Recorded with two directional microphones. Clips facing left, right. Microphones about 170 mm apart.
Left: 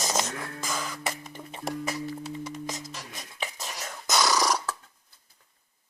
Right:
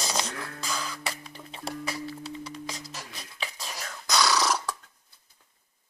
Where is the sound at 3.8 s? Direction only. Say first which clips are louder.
Even; 20° left (ahead or behind).